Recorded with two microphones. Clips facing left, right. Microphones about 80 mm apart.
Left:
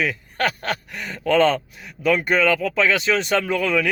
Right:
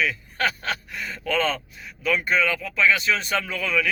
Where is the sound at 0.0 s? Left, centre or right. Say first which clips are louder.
Left 2 dB; left.